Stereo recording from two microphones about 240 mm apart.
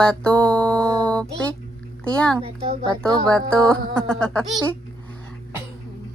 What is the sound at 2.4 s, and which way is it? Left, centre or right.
Speech, right.